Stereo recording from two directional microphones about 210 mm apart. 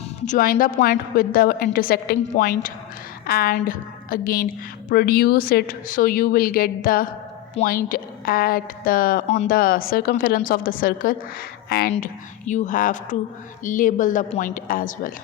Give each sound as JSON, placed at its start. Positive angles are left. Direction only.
{"t": 0.3, "sound": "a woman's voice", "side_deg": 45}